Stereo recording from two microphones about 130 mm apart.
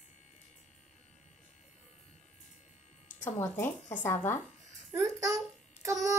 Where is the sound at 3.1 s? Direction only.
70° left (ahead or behind).